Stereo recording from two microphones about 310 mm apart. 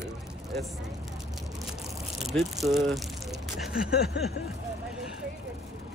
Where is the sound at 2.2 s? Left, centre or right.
Centre.